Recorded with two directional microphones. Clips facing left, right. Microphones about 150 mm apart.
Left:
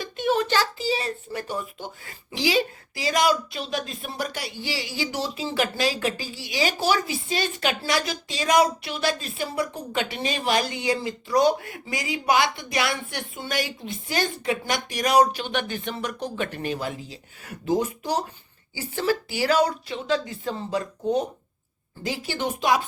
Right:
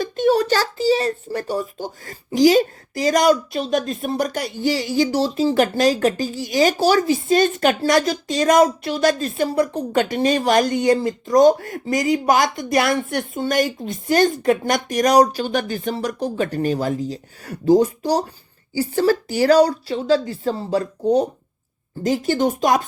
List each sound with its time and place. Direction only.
0.0 s a child's voice: 40° right (ahead or behind)